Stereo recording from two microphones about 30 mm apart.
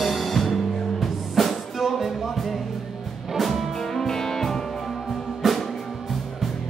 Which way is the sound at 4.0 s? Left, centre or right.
Centre.